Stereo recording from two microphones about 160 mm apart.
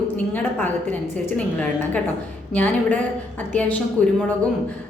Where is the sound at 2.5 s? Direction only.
10° left (ahead or behind).